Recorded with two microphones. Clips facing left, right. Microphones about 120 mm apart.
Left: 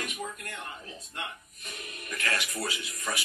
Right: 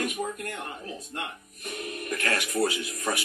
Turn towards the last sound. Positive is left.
turn(degrees=-50)  # may be behind; listen again after turning